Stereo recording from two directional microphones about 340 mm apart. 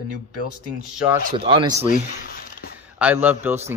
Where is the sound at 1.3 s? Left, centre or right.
Centre.